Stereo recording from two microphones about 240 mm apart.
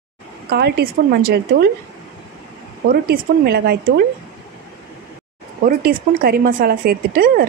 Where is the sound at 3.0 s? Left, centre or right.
Right.